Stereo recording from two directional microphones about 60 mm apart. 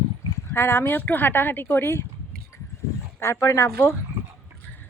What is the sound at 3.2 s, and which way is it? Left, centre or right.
Speech, left.